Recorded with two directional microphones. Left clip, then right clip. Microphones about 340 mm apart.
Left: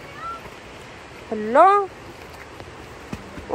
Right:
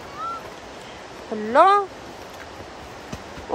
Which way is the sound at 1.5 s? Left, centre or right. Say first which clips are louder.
Left 1 dB; centre.